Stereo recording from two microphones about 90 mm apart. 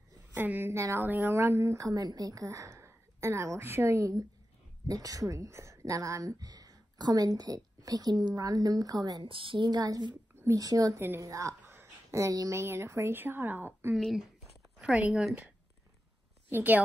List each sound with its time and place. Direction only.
0.3 s a woman's voice: 20° right (ahead or behind); by 9.3 s 45° right (ahead or behind)
9.3 s a woman's voice: 70° right (ahead or behind)
9.7 s a woman's voice: 50° right (ahead or behind)
11.0 s a woman's voice: 30° right (ahead or behind)
13.9 s speech: centre (ahead or behind)
14.8 s speech: 10° right (ahead or behind)
16.4 s a woman's voice: 20° right (ahead or behind)